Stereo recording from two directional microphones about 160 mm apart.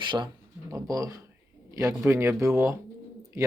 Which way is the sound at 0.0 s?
30° right (ahead or behind).